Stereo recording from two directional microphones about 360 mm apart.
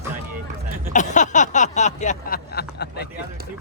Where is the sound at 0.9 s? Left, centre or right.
Centre.